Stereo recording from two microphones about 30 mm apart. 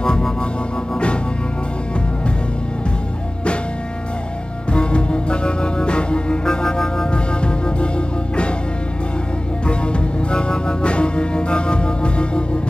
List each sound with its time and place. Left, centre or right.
4.7 s music: left
6.4 s music: left
7.1 s music: left
9.7 s music: left